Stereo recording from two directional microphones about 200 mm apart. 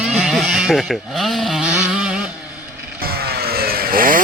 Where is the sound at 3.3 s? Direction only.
50° right (ahead or behind).